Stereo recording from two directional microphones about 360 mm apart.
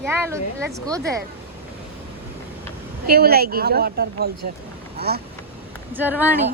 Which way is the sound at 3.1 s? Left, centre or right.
Right.